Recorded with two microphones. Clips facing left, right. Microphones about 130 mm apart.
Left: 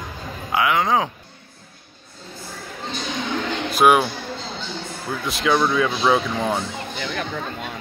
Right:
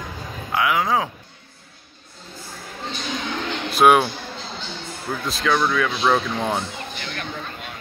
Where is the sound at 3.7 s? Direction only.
Centre (ahead or behind).